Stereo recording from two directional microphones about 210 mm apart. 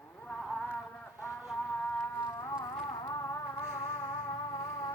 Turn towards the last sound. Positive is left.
turn(degrees=15)  # may be behind; listen again after turning